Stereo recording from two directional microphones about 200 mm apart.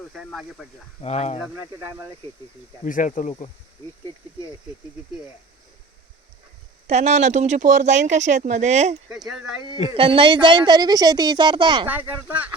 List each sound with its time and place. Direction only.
0.1 s speech: centre (ahead or behind)
1.0 s speech: 35° left (ahead or behind)
1.4 s speech: 15° right (ahead or behind)
2.8 s speech: 40° left (ahead or behind)
6.8 s speech: 35° right (ahead or behind)
9.0 s speech: centre (ahead or behind)
9.9 s a woman's voice: 25° right (ahead or behind)
11.9 s speech: 10° right (ahead or behind)